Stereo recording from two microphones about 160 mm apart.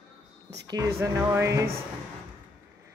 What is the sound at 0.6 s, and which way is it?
Speech, 25° right (ahead or behind).